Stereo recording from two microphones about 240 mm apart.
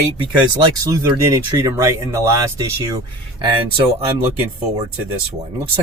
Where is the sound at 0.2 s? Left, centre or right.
Centre.